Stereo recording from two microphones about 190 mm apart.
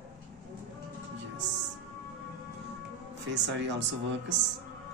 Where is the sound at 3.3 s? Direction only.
70° right (ahead or behind).